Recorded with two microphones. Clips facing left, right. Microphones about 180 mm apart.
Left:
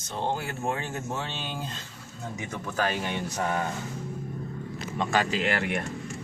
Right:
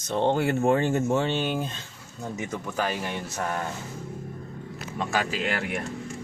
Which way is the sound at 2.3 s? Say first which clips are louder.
Right 1 dB; 10° right (ahead or behind).